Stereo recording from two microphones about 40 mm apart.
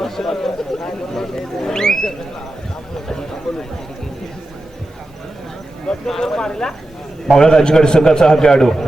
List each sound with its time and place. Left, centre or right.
0.0 s speech: centre
3.1 s a sound: centre
5.9 s a man's voice: centre